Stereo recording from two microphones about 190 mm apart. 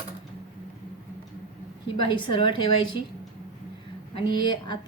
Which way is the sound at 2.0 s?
25° left (ahead or behind).